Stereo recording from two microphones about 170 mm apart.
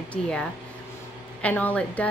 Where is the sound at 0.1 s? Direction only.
5° left (ahead or behind).